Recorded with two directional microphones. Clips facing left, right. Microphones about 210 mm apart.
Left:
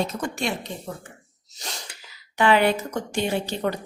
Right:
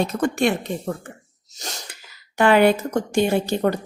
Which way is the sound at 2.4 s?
50° right (ahead or behind).